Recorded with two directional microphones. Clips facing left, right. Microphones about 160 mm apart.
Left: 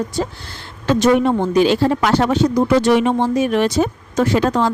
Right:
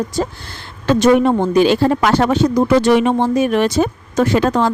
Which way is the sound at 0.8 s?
55° right (ahead or behind).